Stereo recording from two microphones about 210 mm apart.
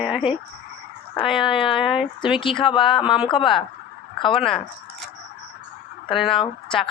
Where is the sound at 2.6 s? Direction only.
25° left (ahead or behind).